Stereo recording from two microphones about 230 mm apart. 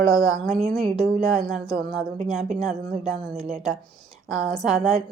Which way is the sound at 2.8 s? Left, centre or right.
Right.